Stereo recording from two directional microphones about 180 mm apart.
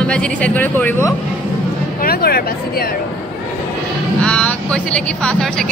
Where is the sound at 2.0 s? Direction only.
55° left (ahead or behind).